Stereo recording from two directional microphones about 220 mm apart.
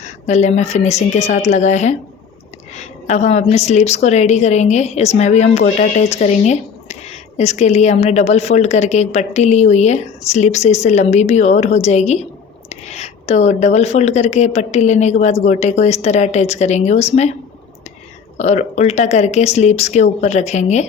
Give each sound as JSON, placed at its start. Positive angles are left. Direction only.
{"t": 0.0, "sound": "a woman's voice", "side_deg": 30}
{"t": 18.3, "sound": "a woman's voice", "side_deg": 30}